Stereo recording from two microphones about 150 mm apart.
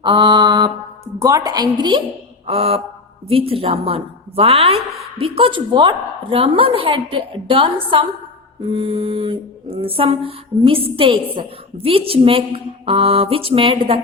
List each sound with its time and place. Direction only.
0.0 s a woman's voice: 30° right (ahead or behind)